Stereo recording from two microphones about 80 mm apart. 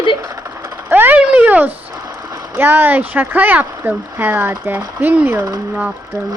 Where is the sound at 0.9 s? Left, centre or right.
Right.